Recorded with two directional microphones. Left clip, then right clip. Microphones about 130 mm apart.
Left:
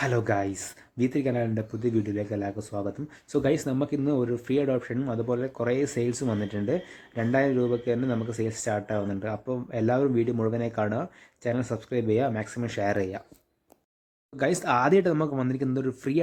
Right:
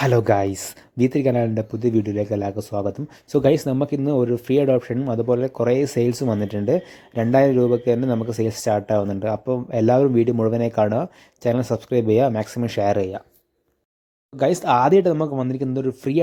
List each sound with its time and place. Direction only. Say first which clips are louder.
0.0 s speech: right 8 dB; 50° right (ahead or behind)
14.3 s speech: right 7 dB; 30° right (ahead or behind)